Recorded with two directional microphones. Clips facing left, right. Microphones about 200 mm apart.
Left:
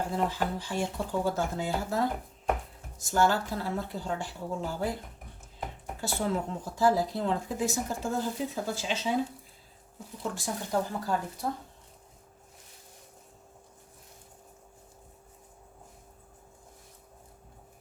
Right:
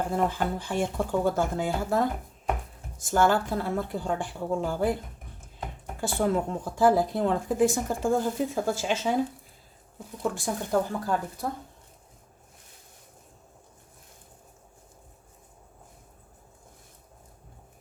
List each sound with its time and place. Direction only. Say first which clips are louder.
0.3 s speech: right 3 dB; 50° right (ahead or behind)
6.0 s speech: right 5 dB; 50° right (ahead or behind)
10.3 s speech: right 3 dB; 55° right (ahead or behind)